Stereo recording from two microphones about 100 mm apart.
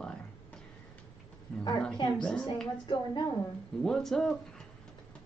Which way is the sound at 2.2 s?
10° left (ahead or behind).